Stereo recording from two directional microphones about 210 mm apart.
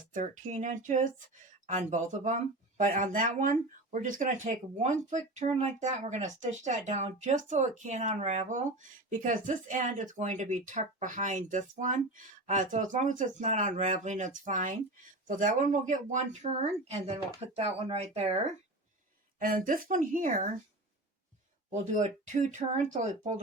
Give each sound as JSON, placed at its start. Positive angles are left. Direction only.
{"t": 0.1, "sound": "speech", "side_deg": -35}
{"t": 19.4, "sound": "speech", "side_deg": -40}
{"t": 21.7, "sound": "speech", "side_deg": -35}